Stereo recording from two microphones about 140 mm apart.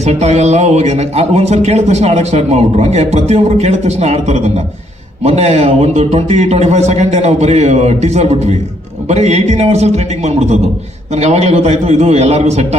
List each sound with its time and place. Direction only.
0.0 s a man's voice: 50° right (ahead or behind)